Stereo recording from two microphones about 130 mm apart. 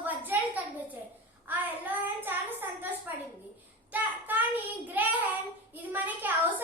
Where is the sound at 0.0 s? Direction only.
15° right (ahead or behind).